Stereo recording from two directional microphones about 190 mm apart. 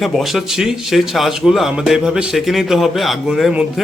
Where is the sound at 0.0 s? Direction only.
Centre (ahead or behind).